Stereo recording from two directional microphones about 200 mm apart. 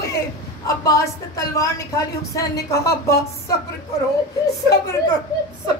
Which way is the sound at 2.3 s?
15° left (ahead or behind).